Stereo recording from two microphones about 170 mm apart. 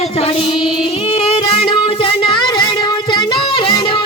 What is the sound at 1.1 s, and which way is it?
Music, 35° left (ahead or behind).